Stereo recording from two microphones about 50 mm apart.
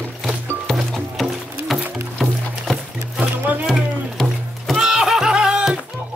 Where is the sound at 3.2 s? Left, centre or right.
Right.